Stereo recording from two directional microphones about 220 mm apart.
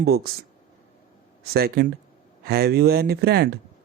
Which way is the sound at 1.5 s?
45° right (ahead or behind).